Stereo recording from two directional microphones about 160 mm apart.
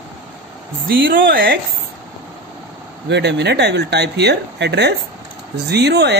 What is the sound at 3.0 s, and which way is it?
Speech, 90° right.